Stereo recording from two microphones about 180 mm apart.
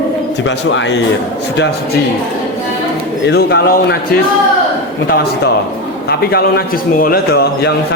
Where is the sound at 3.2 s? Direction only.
65° left (ahead or behind).